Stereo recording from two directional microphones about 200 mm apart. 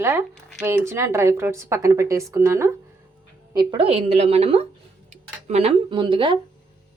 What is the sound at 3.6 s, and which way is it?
A woman's voice, 25° right (ahead or behind).